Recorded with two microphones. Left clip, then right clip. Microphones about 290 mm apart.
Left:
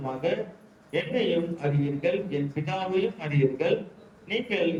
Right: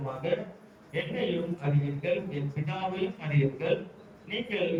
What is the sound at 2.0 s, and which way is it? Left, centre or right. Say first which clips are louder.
A man's voice: left 3 dB; left.